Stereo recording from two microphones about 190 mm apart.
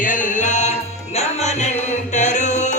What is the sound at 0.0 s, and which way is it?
Music, 45° left (ahead or behind).